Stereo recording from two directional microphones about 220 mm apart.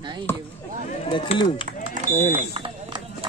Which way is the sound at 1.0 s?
25° left (ahead or behind).